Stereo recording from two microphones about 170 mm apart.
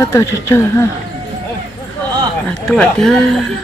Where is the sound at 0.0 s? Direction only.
15° left (ahead or behind).